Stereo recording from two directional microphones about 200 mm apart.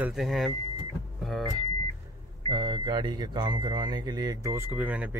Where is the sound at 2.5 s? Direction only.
25° right (ahead or behind); by 5.1 s 5° right (ahead or behind).